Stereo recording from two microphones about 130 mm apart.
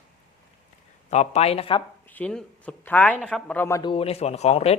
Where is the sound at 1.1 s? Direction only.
60° left (ahead or behind).